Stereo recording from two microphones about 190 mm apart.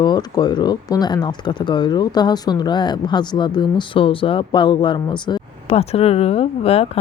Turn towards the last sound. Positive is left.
turn(degrees=30)  # may be behind; listen again after turning